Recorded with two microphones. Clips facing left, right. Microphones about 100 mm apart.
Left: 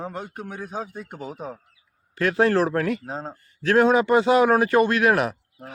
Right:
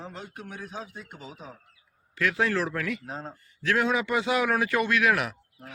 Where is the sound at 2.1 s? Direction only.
40° left (ahead or behind).